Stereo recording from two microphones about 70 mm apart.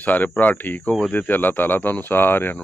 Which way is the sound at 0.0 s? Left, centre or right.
Left.